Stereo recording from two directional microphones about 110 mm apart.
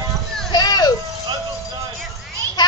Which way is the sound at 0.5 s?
35° left (ahead or behind).